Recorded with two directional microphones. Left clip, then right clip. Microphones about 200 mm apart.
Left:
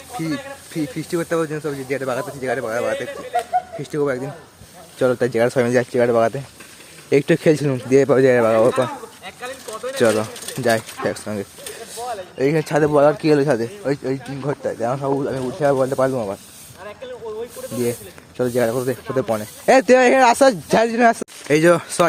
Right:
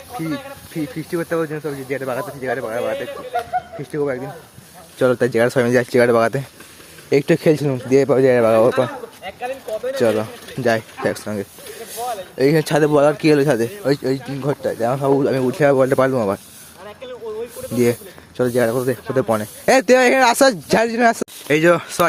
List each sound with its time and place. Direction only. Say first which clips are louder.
0.1 s snake: even; 10° left (ahead or behind)
0.9 s a man's voice: even; 10° left (ahead or behind)
3.3 s speech: left 1 dB; 25° left (ahead or behind)
3.9 s a man's voice: left 1 dB; 10° left (ahead or behind)
4.9 s speech: right 2 dB; 5° right (ahead or behind)
7.1 s speech: even; centre (ahead or behind)
10.0 s speech: left 2 dB; centre (ahead or behind); by 15.1 s 15° right (ahead or behind)
15.1 s speech: right 5 dB; 30° right (ahead or behind)
15.4 s speech: right 2 dB; 40° right (ahead or behind)
17.6 s snake: right 1 dB; centre (ahead or behind)
18.3 s speech: right 2 dB; 15° right (ahead or behind)
21.4 s speech: even; centre (ahead or behind)